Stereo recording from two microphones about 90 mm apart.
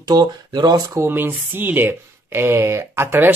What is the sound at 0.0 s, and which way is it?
Speech, 50° right (ahead or behind).